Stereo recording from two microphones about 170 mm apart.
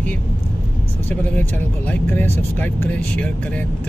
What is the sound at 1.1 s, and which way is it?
Speech, 10° left (ahead or behind).